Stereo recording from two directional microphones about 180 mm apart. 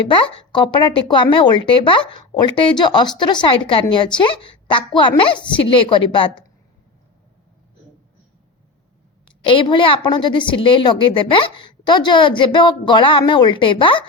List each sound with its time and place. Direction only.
0.1 s speech: 30° left (ahead or behind)
9.5 s speech: 30° left (ahead or behind)